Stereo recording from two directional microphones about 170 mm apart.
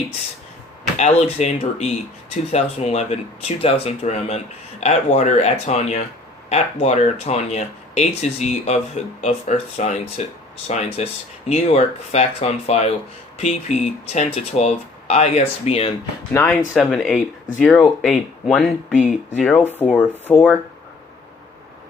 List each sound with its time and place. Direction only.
0.9 s speech: 40° left (ahead or behind)
16.3 s speech: 15° left (ahead or behind)
16.7 s speech: centre (ahead or behind)